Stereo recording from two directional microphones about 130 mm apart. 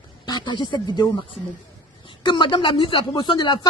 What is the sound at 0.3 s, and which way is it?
Speech, 35° left (ahead or behind).